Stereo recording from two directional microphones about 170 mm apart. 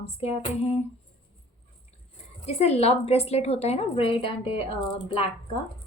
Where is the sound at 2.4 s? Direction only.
40° left (ahead or behind).